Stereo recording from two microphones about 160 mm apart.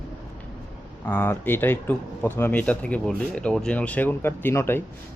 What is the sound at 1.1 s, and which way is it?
A man's voice, 10° left (ahead or behind).